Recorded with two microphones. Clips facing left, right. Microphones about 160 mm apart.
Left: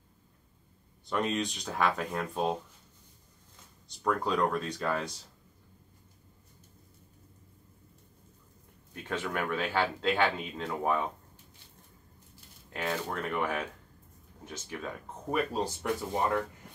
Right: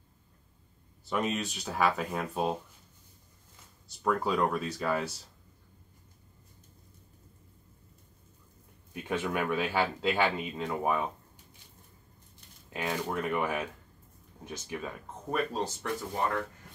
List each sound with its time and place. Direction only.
1.0 s speech: 5° right (ahead or behind)
4.0 s speech: 5° right (ahead or behind)
8.9 s speech: 10° right (ahead or behind)
12.6 s speech: 10° right (ahead or behind)
15.3 s speech: 10° left (ahead or behind)